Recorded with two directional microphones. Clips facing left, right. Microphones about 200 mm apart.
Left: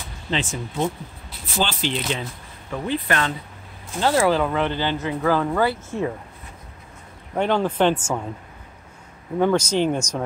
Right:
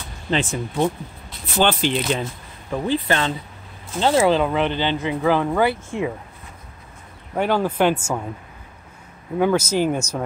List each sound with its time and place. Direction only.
0.3 s speech: 55° right (ahead or behind)
2.7 s speech: 30° right (ahead or behind); by 6.1 s 15° right (ahead or behind)
7.3 s speech: 5° right (ahead or behind)
9.4 s speech: 5° right (ahead or behind)